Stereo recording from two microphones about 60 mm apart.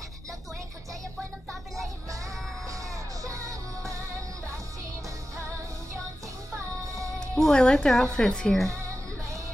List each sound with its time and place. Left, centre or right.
2.0 s music: right
7.2 s a woman's voice: centre